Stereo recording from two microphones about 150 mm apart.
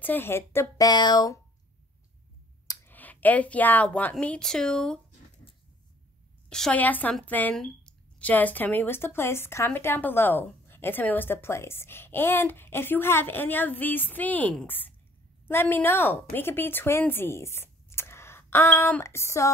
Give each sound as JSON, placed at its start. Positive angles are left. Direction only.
{"t": 0.0, "sound": "speech", "side_deg": 15}
{"t": 0.8, "sound": "speech", "side_deg": 30}
{"t": 2.7, "sound": "speech", "side_deg": 15}
{"t": 6.5, "sound": "a woman's voice", "side_deg": 5}